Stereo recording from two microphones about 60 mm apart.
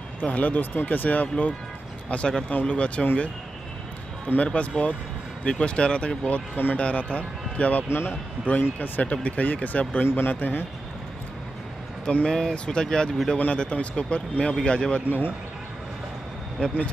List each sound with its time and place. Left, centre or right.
0.2 s speech: left
4.4 s speech: left
7.9 s speech: left
8.7 s speech: left
12.3 s speech: centre
15.0 s speech: left
16.5 s speech: centre